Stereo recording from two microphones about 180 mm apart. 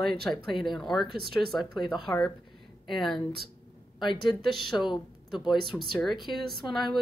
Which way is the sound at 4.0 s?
25° left (ahead or behind).